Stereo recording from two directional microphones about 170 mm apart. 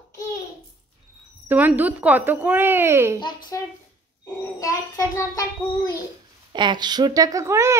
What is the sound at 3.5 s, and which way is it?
A child's voice, 15° left (ahead or behind).